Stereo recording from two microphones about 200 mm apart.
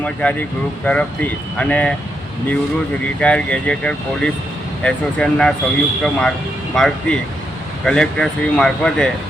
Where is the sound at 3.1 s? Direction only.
5° left (ahead or behind).